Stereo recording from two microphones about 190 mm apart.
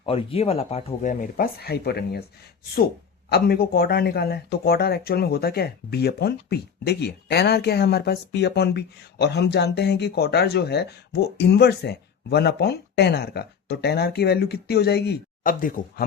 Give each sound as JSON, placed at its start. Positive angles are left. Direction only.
{"t": 0.0, "sound": "speech", "side_deg": 30}
{"t": 3.2, "sound": "speech", "side_deg": 55}